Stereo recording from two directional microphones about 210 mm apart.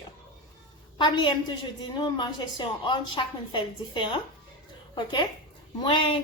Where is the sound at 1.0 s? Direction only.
20° left (ahead or behind).